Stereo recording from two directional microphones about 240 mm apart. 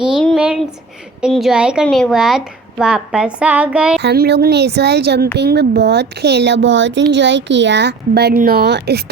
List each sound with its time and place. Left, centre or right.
0.1 s a sound: centre
1.2 s speech: centre
4.0 s speech: right